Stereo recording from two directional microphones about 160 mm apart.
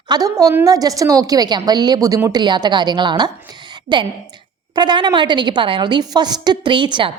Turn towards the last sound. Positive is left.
turn(degrees=-30)  # may be behind; listen again after turning